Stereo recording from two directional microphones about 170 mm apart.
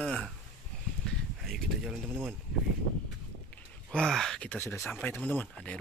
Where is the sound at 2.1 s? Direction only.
15° right (ahead or behind).